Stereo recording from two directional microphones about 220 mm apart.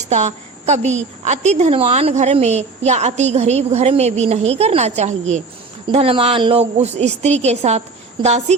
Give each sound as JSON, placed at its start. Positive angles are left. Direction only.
{"t": 0.1, "sound": "a woman's voice", "side_deg": -30}